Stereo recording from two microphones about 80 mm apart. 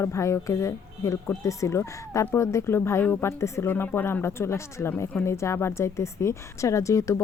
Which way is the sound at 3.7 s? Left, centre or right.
Left.